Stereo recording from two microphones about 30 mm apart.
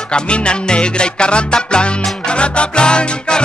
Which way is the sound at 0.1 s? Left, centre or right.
Left.